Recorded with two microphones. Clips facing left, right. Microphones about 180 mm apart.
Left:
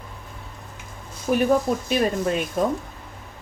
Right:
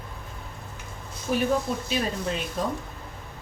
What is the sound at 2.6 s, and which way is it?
Speech, 50° left (ahead or behind).